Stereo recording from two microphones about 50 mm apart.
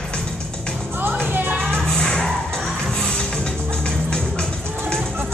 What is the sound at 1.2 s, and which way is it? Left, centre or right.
Music, right.